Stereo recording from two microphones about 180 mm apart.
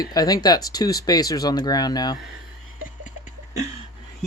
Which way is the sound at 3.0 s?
45° left (ahead or behind).